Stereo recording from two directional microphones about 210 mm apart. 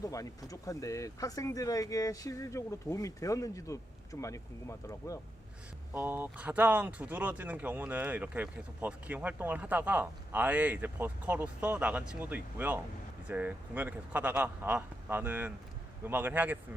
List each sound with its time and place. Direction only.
0.0 s speech: 15° left (ahead or behind)
5.9 s speech: 10° right (ahead or behind)